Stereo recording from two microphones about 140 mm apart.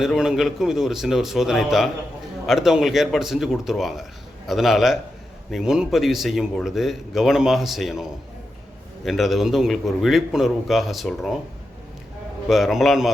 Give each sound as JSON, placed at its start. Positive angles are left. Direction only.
{"t": 0.0, "sound": "speech", "side_deg": 0}
{"t": 9.0, "sound": "speech", "side_deg": 0}
{"t": 12.5, "sound": "speech", "side_deg": 0}